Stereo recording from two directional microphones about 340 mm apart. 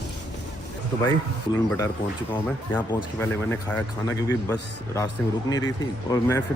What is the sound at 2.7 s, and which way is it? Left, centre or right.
Speech, centre.